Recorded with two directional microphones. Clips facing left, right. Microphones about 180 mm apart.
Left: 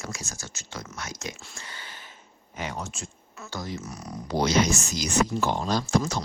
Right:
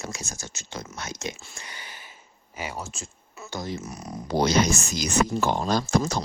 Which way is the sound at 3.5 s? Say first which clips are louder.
Right 2 dB; 25° right (ahead or behind).